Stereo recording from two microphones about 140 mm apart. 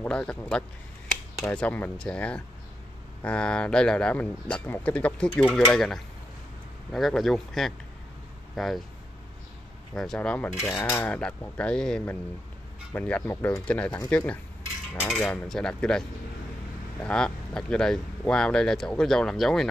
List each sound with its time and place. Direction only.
0.0 s speech: 10° left (ahead or behind)
9.9 s speech: 5° left (ahead or behind)